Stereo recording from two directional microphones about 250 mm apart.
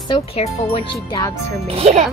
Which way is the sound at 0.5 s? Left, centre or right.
Left.